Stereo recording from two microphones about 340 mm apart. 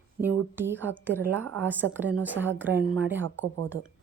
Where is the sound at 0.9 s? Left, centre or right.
Centre.